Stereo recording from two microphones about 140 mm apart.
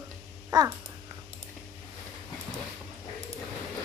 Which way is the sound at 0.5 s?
25° right (ahead or behind).